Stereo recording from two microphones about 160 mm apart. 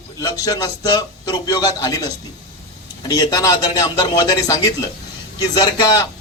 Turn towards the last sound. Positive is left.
turn(degrees=25)  # may be behind; listen again after turning